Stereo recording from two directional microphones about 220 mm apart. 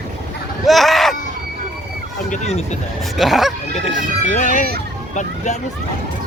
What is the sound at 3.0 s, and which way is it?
Speech, centre (ahead or behind).